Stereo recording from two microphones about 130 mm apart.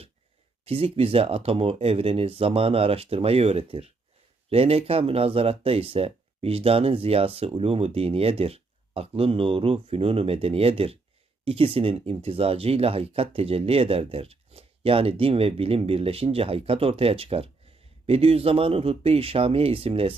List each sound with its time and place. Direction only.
0.6 s speech: 45° right (ahead or behind)